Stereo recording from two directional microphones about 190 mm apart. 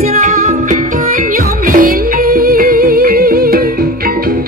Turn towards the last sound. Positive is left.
turn(degrees=-50)  # may be behind; listen again after turning